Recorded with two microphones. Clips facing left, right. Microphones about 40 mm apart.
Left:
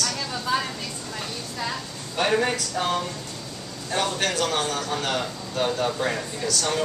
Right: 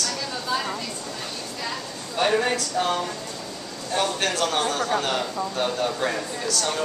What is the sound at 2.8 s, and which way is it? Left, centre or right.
Speech, centre.